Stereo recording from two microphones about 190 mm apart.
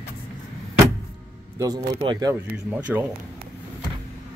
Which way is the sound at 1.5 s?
20° right (ahead or behind).